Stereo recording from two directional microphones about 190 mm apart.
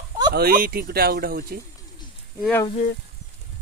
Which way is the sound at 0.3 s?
50° right (ahead or behind).